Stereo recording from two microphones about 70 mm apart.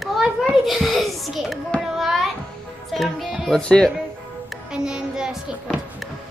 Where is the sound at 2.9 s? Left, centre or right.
Centre.